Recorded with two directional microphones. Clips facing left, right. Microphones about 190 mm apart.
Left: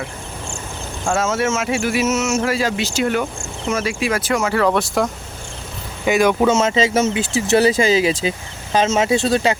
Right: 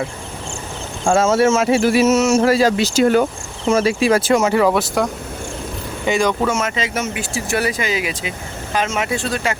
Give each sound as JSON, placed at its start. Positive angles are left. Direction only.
{"t": 1.0, "sound": "speech", "side_deg": -30}
{"t": 4.7, "sound": "speech", "side_deg": 0}
{"t": 6.4, "sound": "speech", "side_deg": 25}